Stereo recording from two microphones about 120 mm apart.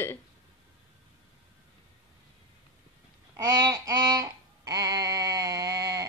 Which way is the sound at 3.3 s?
30° right (ahead or behind).